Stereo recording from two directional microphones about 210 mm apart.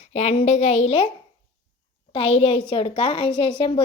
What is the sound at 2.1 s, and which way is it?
A woman's voice, 25° left (ahead or behind).